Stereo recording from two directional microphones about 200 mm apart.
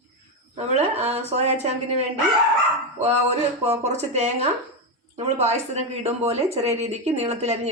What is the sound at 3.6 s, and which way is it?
Speech, 35° right (ahead or behind).